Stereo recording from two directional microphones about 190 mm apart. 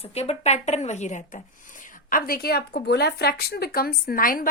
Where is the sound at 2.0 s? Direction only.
50° left (ahead or behind).